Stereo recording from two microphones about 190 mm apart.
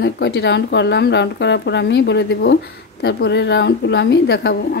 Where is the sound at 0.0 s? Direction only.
65° left (ahead or behind).